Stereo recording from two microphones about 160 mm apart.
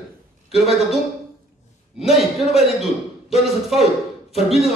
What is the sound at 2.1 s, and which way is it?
Speech, centre (ahead or behind).